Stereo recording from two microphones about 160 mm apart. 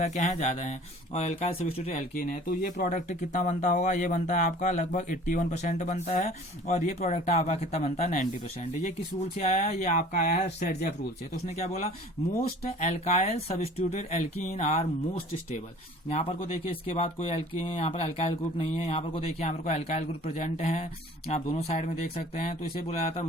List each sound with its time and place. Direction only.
0.0 s speech: 45° left (ahead or behind)
2.1 s speech: 60° left (ahead or behind); by 8.0 s 40° left (ahead or behind)
8.0 s speech: 55° left (ahead or behind)
8.8 s speech: 45° left (ahead or behind)